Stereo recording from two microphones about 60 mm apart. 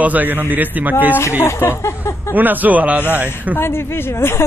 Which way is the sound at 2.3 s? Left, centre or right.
Right.